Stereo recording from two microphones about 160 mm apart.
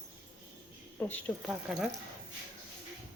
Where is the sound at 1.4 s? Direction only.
5° right (ahead or behind).